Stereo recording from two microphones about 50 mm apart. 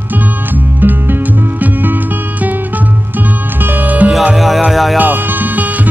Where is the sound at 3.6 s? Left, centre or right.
Right.